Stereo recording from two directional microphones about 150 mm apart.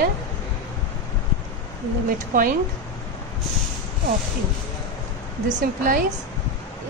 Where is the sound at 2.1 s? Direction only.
65° right (ahead or behind).